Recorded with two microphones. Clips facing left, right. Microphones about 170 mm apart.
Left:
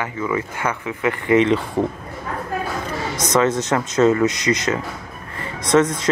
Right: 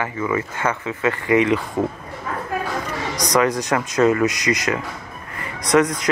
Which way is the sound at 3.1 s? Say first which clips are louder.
Left 1 dB; 25° left (ahead or behind).